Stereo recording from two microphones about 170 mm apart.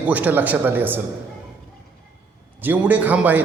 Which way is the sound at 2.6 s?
10° right (ahead or behind).